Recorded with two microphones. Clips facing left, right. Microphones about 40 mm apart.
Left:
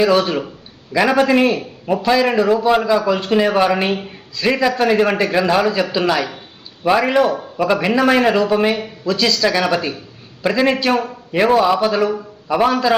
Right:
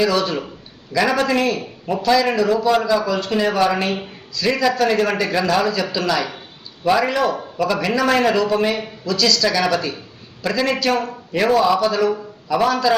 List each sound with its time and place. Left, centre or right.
0.0 s speech: left